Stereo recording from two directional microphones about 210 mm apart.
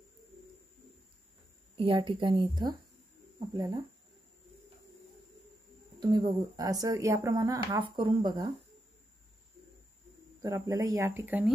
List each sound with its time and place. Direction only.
1.8 s a woman's voice: 25° right (ahead or behind)
5.9 s speech: 20° right (ahead or behind)
10.4 s speech: 15° right (ahead or behind)